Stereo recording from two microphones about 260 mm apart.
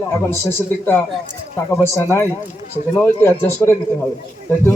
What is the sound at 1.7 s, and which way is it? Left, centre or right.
A man's voice, centre.